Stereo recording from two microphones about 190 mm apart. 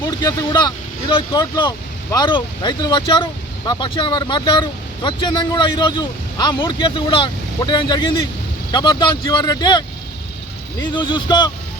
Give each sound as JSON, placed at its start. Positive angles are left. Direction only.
{"t": 0.0, "sound": "speech", "side_deg": 20}
{"t": 10.9, "sound": "speech", "side_deg": 25}